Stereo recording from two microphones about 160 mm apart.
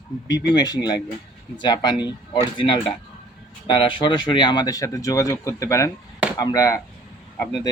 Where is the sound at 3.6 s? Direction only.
30° left (ahead or behind).